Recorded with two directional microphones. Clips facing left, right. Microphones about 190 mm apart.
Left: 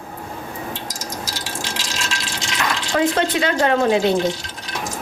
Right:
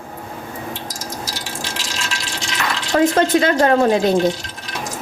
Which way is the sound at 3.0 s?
45° right (ahead or behind).